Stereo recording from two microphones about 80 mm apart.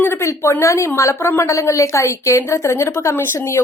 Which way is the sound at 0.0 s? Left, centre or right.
Left.